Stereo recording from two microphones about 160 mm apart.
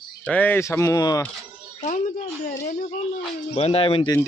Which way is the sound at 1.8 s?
50° left (ahead or behind).